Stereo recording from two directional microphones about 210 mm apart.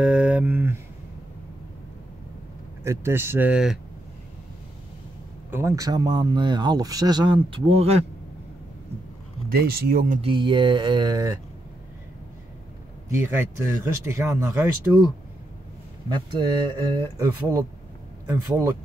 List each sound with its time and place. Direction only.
0.0 s a sound: 5° right (ahead or behind)
2.8 s speech: 10° right (ahead or behind)
5.5 s speech: 10° right (ahead or behind); by 8.0 s 30° right (ahead or behind)
9.5 s speech: 45° right (ahead or behind)
10.2 s speech: 20° right (ahead or behind)
13.1 s speech: 10° right (ahead or behind)
16.1 s speech: 20° right (ahead or behind)